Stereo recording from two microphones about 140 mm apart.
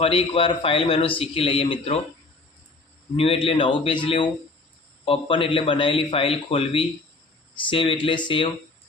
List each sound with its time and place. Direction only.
0.0 s a man's voice: 40° left (ahead or behind)
3.2 s a man's voice: 40° left (ahead or behind)